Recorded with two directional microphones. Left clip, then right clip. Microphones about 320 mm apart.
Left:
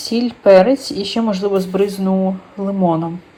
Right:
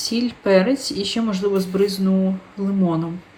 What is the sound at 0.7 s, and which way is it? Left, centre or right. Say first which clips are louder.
Speech: left 3 dB; centre.